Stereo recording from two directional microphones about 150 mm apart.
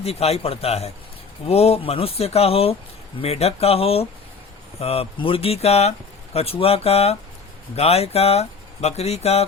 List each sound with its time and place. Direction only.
0.0 s speech: 40° left (ahead or behind)